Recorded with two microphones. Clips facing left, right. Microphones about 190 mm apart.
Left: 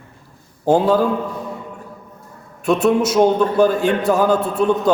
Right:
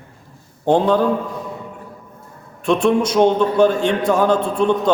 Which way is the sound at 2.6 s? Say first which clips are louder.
Even; 5° left (ahead or behind).